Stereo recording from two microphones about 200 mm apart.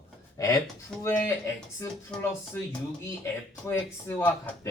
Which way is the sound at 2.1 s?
5° left (ahead or behind).